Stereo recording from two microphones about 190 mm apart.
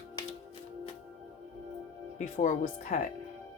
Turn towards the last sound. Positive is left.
turn(degrees=40)  # may be behind; listen again after turning